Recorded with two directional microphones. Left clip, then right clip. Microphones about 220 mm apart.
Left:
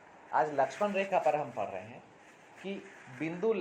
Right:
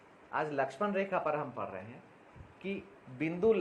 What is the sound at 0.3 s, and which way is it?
A man's voice, 35° right (ahead or behind).